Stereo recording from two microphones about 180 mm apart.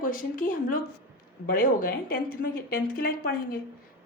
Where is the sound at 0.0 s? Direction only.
50° left (ahead or behind).